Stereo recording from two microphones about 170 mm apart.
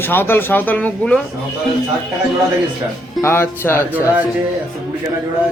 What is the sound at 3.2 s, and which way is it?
Speech, 15° left (ahead or behind).